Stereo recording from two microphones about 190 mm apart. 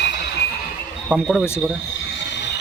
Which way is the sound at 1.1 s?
Centre (ahead or behind).